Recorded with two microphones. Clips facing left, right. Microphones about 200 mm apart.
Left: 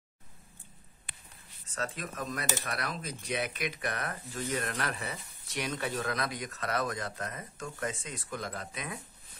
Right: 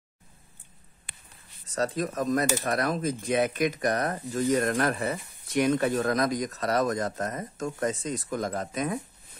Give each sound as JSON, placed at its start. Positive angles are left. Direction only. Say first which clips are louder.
{"t": 1.8, "sound": "speech", "louder": "right 9 dB", "side_deg": -40}